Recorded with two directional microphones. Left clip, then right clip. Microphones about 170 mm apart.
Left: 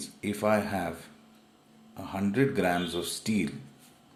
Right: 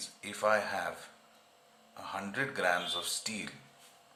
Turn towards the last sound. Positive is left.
turn(degrees=20)  # may be behind; listen again after turning